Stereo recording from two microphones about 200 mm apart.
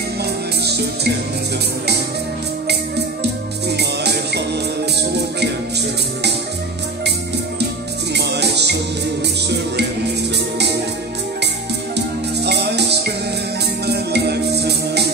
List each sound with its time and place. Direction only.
2.7 s music: 55° right (ahead or behind)
8.1 s music: 55° right (ahead or behind)
12.4 s music: 55° right (ahead or behind)